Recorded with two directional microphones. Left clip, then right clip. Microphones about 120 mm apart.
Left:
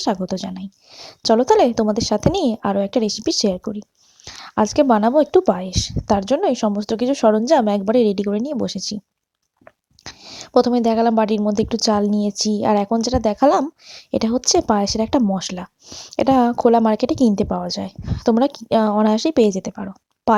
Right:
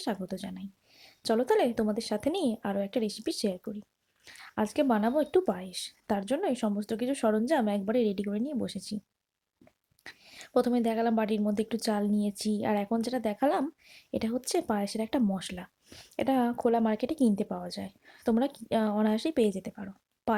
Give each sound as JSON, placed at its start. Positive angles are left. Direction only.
{"t": 0.3, "sound": "a woman's voice", "side_deg": 45}
{"t": 10.0, "sound": "a woman's voice", "side_deg": 50}
{"t": 15.9, "sound": "speech", "side_deg": 30}
{"t": 16.1, "sound": "a woman's voice", "side_deg": 50}